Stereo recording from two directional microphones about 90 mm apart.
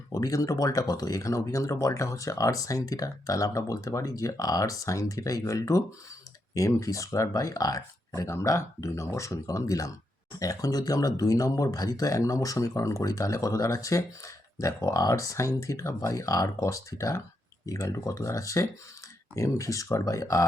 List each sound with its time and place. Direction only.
0.1 s speech: 40° left (ahead or behind)